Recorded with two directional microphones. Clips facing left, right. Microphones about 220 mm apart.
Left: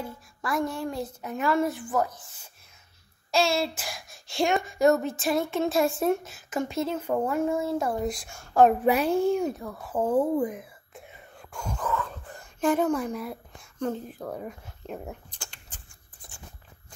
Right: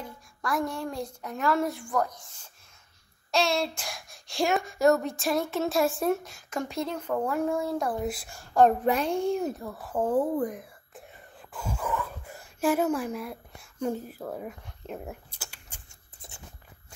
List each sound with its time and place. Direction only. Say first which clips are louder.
0.0 s a woman's voice: left 2 dB; centre (ahead or behind)
3.3 s a woman's voice: left 2 dB; centre (ahead or behind)
16.2 s a sound: right 1 dB; 20° right (ahead or behind)